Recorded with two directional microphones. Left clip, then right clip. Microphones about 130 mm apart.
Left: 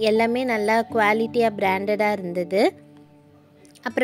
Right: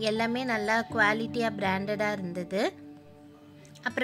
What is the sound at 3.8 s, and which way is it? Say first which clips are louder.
Speech: left 6 dB; 30° left (ahead or behind).